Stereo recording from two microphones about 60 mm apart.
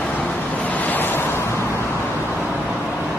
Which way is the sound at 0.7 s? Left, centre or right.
Left.